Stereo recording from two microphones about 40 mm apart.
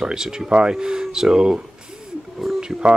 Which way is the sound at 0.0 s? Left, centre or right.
Centre.